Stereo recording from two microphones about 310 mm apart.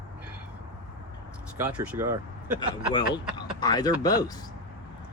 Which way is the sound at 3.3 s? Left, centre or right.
Centre.